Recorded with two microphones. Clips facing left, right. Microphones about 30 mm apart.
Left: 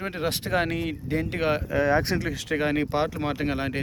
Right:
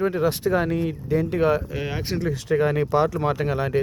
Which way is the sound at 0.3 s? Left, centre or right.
Left.